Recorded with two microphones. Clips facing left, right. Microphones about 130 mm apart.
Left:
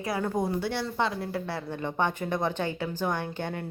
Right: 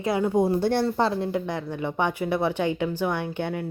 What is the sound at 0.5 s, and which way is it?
Speech, 50° right (ahead or behind).